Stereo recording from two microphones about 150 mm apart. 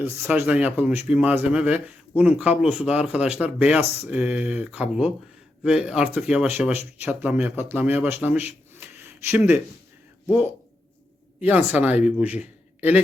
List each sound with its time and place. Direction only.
0.0 s speech: 15° right (ahead or behind)
11.3 s speech: 10° right (ahead or behind)